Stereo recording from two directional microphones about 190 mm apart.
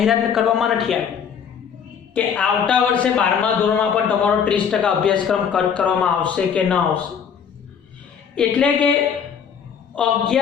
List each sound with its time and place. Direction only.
0.0 s speech: centre (ahead or behind)
2.1 s a man's voice: 5° left (ahead or behind)
8.4 s speech: 5° left (ahead or behind)
9.9 s a man's voice: 5° left (ahead or behind)